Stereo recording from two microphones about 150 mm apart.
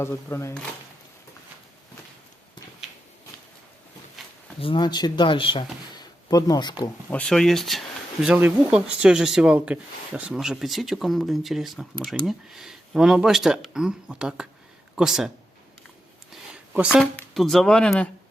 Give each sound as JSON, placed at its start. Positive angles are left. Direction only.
{"t": 0.0, "sound": "speech", "side_deg": 15}
{"t": 4.6, "sound": "speech", "side_deg": 30}
{"t": 7.1, "sound": "speech", "side_deg": 5}
{"t": 16.3, "sound": "a sound", "side_deg": -5}
{"t": 17.0, "sound": "speech", "side_deg": 5}